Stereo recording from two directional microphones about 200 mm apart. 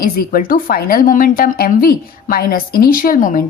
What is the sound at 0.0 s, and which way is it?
Speech, 45° left (ahead or behind).